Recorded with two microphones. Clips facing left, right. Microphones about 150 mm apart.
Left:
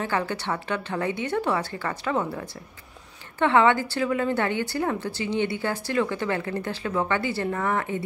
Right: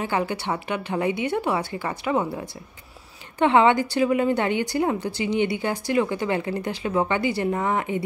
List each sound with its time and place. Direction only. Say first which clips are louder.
0.0 s a woman's voice: right 2 dB; 15° right (ahead or behind)